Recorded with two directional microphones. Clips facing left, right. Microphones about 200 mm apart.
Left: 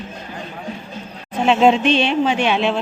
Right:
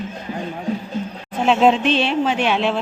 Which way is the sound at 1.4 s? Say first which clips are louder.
Left 1 dB; centre (ahead or behind).